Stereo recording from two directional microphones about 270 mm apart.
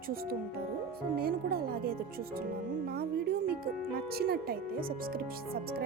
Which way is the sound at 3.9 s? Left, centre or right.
Right.